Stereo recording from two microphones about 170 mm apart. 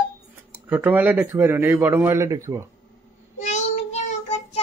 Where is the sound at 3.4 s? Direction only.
40° left (ahead or behind).